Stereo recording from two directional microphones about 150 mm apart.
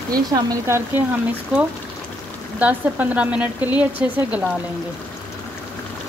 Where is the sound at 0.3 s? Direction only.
20° right (ahead or behind).